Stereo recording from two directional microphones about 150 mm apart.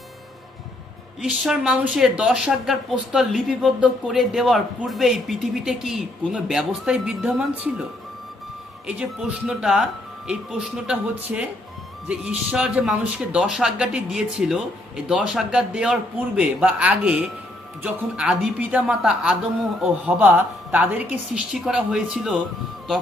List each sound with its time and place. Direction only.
1.2 s speech: 5° right (ahead or behind)
8.9 s a man's voice: 5° right (ahead or behind)